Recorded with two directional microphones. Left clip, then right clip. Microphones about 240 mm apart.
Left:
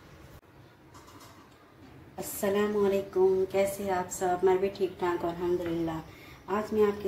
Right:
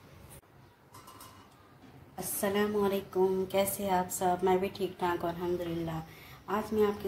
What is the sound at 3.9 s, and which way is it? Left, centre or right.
A woman's voice, right.